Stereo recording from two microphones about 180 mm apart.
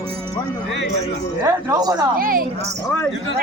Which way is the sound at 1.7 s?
20° right (ahead or behind).